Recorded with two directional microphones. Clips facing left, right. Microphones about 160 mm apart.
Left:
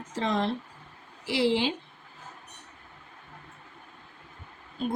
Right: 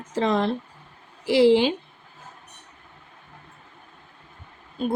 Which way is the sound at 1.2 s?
50° right (ahead or behind).